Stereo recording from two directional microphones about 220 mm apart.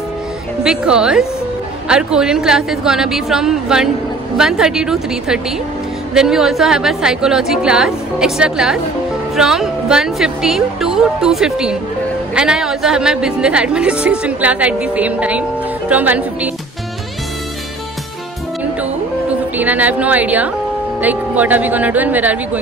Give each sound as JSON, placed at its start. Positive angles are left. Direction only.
{"t": 0.7, "sound": "a woman's voice", "side_deg": -5}
{"t": 19.5, "sound": "speech", "side_deg": -5}